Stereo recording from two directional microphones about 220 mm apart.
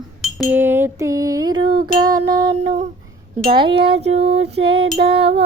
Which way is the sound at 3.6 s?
25° right (ahead or behind).